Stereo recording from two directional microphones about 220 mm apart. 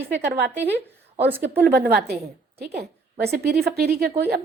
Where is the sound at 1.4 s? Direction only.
45° right (ahead or behind).